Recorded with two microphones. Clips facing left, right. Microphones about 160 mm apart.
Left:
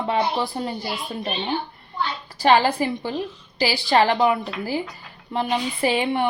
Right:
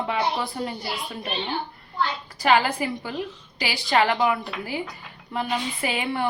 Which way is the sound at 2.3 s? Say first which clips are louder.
Left 3 dB; 30° left (ahead or behind).